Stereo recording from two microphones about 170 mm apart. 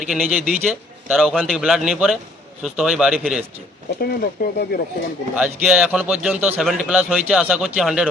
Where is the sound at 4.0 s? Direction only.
65° left (ahead or behind).